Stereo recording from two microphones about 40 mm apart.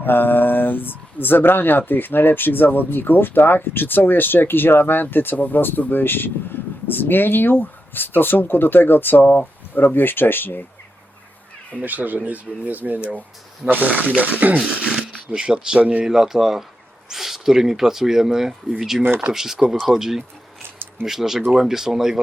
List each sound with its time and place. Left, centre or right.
0.0 s speech: left
11.8 s speech: right
14.7 s speech: right
15.4 s speech: centre
16.0 s speech: centre
19.0 s speech: right
19.3 s speech: centre